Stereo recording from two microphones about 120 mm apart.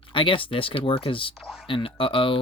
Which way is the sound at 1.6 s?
50° left (ahead or behind).